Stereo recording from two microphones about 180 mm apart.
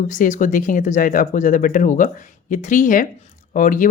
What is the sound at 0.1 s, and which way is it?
Speech, 45° left (ahead or behind).